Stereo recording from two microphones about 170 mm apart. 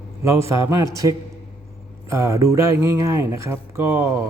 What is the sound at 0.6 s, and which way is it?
Speech, 15° right (ahead or behind).